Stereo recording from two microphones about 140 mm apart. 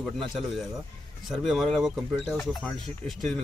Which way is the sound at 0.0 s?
Centre (ahead or behind).